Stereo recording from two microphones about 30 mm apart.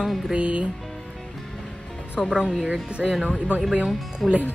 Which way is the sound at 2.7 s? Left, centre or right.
Right.